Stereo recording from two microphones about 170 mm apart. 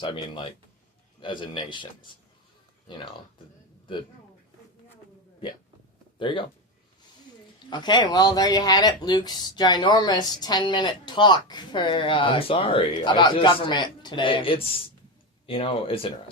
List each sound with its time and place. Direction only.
0.0 s speech: 30° left (ahead or behind)
2.9 s speech: 30° left (ahead or behind)
6.1 s speech: 30° left (ahead or behind)
7.7 s speech: 25° left (ahead or behind)